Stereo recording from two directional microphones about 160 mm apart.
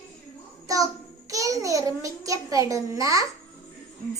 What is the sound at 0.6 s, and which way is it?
Child singing, 20° right (ahead or behind).